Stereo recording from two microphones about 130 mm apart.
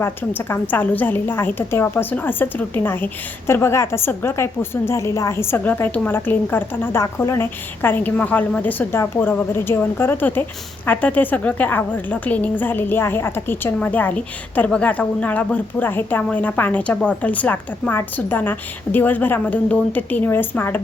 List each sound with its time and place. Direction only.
0.0 s a woman's voice: 15° left (ahead or behind)